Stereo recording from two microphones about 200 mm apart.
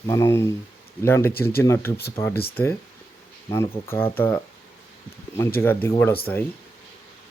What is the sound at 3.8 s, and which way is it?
Speech, 10° left (ahead or behind).